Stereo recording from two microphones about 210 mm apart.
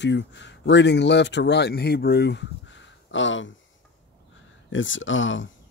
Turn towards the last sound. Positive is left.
turn(degrees=65)  # may be behind; listen again after turning